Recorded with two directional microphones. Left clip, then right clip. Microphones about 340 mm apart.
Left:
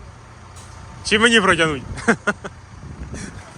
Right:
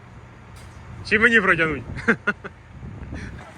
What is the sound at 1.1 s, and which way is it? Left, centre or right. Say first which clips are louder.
Speech: left 2 dB; centre.